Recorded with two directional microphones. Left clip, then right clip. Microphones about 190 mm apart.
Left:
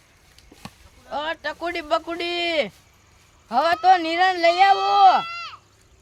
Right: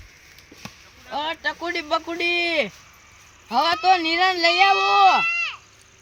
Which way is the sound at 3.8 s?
20° left (ahead or behind).